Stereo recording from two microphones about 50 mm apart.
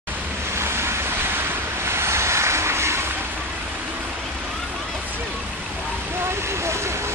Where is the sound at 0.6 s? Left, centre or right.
Right.